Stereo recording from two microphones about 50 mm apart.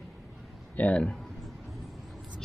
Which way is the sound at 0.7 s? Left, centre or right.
Left.